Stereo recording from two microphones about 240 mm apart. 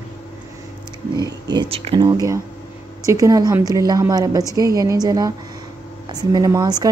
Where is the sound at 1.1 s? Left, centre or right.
Centre.